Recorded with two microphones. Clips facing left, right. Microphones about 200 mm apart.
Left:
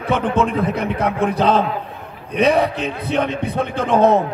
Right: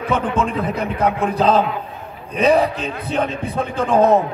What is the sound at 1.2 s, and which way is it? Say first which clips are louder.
Speech: left 1 dB; 70° left (ahead or behind).